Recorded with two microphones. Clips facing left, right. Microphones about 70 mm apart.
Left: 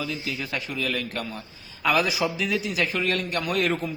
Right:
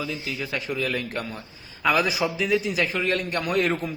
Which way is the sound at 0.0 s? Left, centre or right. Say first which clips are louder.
Even; centre.